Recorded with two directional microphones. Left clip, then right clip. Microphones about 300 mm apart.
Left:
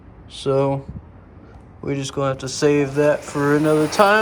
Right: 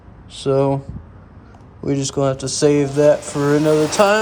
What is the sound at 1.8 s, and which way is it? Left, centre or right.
Speech, centre.